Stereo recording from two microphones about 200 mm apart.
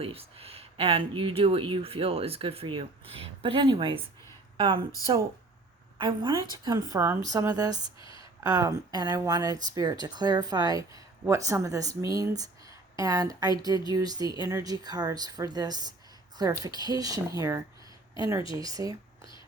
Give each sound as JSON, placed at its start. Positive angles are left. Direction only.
{"t": 0.0, "sound": "speech", "side_deg": -30}
{"t": 6.0, "sound": "speech", "side_deg": -25}
{"t": 8.0, "sound": "a sound", "side_deg": 25}
{"t": 8.4, "sound": "speech", "side_deg": -15}